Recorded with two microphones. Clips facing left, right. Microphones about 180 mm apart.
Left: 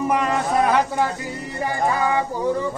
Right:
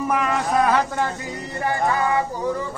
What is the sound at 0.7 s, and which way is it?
Speech, 15° left (ahead or behind).